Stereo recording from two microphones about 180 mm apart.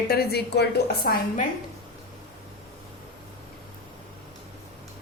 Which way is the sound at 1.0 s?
55° left (ahead or behind).